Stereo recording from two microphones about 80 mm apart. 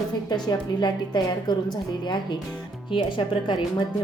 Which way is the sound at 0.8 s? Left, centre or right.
Left.